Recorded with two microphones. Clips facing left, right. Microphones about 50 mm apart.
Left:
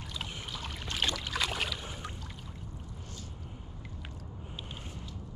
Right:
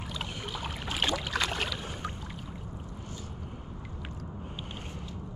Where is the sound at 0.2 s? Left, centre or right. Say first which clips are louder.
Right 4 dB; centre.